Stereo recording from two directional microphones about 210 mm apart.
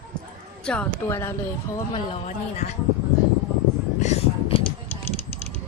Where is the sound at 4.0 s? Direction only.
30° left (ahead or behind).